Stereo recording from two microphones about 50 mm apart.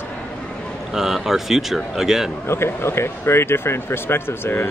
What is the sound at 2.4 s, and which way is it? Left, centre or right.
Speech, left.